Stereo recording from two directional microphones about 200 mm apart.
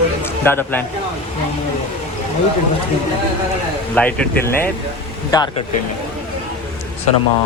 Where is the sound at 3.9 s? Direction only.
10° left (ahead or behind).